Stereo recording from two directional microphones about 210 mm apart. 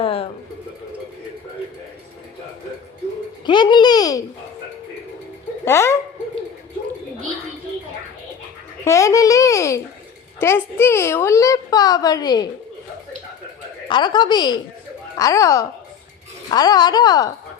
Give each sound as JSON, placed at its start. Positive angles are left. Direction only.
{"t": 0.0, "sound": "a sound", "side_deg": 25}
{"t": 3.4, "sound": "a woman's voice", "side_deg": 20}
{"t": 5.6, "sound": "a woman's voice", "side_deg": 10}
{"t": 8.8, "sound": "a woman's voice", "side_deg": 15}
{"t": 13.8, "sound": "a woman's voice", "side_deg": 20}